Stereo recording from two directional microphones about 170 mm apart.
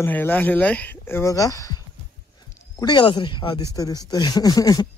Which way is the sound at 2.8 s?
25° left (ahead or behind).